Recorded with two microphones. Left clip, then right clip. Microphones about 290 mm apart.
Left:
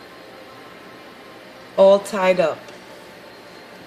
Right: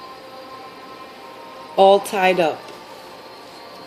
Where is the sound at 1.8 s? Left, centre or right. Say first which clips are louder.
Even; centre.